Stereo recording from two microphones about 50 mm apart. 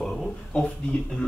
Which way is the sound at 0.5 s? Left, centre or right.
Left.